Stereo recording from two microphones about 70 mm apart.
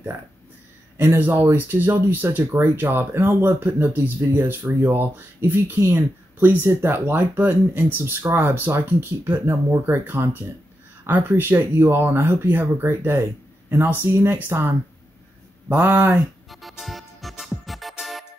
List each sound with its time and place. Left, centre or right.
1.1 s speech: right
15.7 s speech: right
16.4 s music: centre